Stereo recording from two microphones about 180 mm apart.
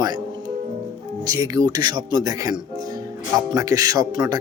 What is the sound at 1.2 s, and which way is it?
A man's voice, 20° right (ahead or behind).